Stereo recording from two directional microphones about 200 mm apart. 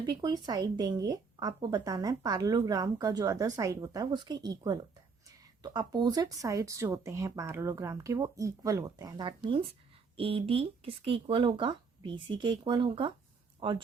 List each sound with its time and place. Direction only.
0.0 s speech: 20° right (ahead or behind)